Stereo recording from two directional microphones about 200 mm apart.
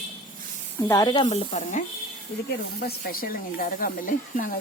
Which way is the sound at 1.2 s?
35° left (ahead or behind).